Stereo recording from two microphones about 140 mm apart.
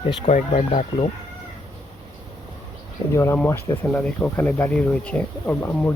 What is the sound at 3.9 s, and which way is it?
Speech, 10° left (ahead or behind).